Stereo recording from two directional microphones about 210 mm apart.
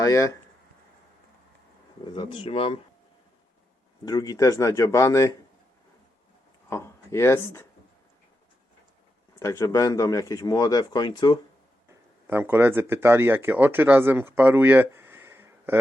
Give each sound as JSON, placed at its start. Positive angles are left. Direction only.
{"t": 0.0, "sound": "speech", "side_deg": 15}
{"t": 2.0, "sound": "speech", "side_deg": 25}
{"t": 4.0, "sound": "speech", "side_deg": 20}
{"t": 6.7, "sound": "speech", "side_deg": 15}
{"t": 9.4, "sound": "speech", "side_deg": 15}
{"t": 12.3, "sound": "speech", "side_deg": -10}